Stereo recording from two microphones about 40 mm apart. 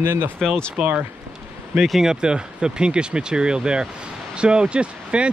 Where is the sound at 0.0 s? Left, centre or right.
Right.